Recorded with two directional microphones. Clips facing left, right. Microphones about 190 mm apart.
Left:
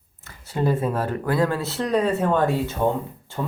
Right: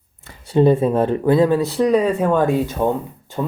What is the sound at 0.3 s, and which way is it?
Speech, 25° right (ahead or behind).